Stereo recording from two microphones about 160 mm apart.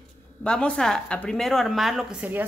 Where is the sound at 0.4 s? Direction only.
5° left (ahead or behind).